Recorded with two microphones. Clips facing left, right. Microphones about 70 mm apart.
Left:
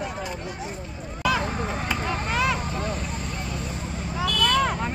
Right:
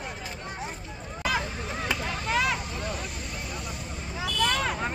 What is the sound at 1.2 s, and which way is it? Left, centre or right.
Vehicle, left.